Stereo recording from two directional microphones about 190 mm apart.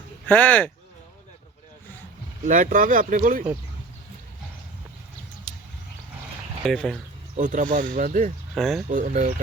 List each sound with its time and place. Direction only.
0.3 s speech: 10° left (ahead or behind)
2.5 s speech: 45° right (ahead or behind)
5.5 s a sound: 5° left (ahead or behind)
6.7 s speech: centre (ahead or behind)
7.3 s speech: 40° right (ahead or behind)
8.5 s speech: centre (ahead or behind)
8.9 s speech: 40° right (ahead or behind)